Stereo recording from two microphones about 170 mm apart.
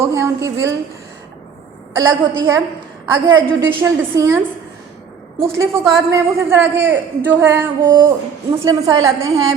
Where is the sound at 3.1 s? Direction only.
25° right (ahead or behind).